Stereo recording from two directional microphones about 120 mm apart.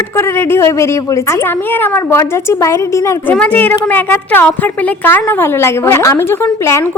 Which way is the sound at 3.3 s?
10° left (ahead or behind).